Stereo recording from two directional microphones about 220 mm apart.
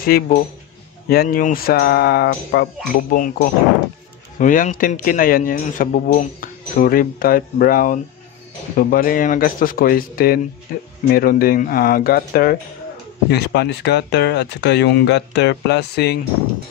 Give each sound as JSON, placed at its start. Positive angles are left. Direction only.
{"t": 0.0, "sound": "speech", "side_deg": 45}